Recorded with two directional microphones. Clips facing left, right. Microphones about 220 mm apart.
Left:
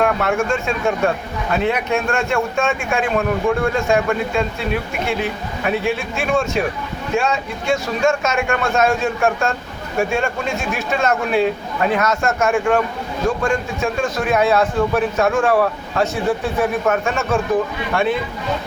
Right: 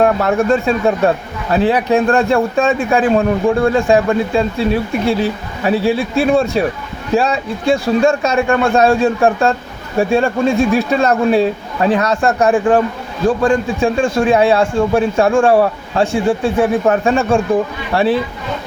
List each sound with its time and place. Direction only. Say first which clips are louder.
0.0 s speech: right 5 dB; 35° right (ahead or behind)